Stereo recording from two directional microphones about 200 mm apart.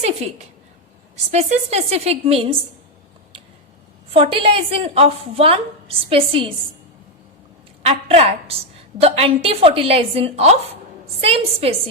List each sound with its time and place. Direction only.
0.0 s a woman's voice: 35° right (ahead or behind)
4.1 s a woman's voice: 30° right (ahead or behind)
7.8 s a woman's voice: 30° right (ahead or behind)